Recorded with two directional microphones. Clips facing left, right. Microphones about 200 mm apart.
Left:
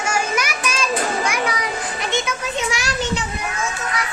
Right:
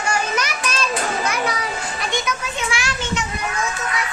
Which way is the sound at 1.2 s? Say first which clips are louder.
Even; 10° left (ahead or behind).